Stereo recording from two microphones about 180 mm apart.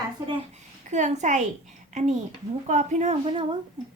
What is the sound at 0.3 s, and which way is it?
A child's voice, 40° right (ahead or behind).